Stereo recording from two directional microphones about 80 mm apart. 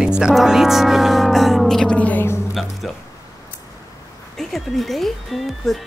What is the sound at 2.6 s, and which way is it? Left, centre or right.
Speech, centre.